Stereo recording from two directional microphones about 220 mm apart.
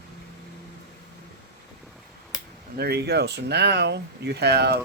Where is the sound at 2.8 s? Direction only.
45° right (ahead or behind).